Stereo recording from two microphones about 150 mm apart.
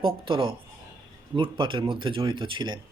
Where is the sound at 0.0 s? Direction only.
35° right (ahead or behind).